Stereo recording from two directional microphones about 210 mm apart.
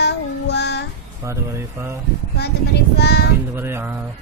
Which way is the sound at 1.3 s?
15° right (ahead or behind).